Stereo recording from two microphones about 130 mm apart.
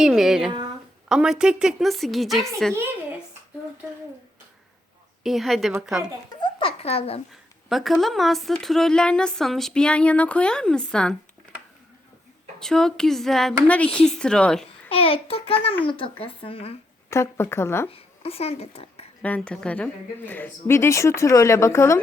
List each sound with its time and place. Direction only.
0.0 s a woman's voice: centre (ahead or behind)
2.7 s a child's voice: 15° right (ahead or behind)
5.2 s a woman's voice: centre (ahead or behind)
6.4 s a sound: 45° left (ahead or behind)
7.7 s a woman's voice: centre (ahead or behind)
12.5 s a woman's voice: 5° left (ahead or behind)
14.8 s speech: 45° left (ahead or behind)
17.1 s a woman's voice: 20° left (ahead or behind)
17.8 s speech: 50° left (ahead or behind)
19.2 s a woman's voice: 10° left (ahead or behind)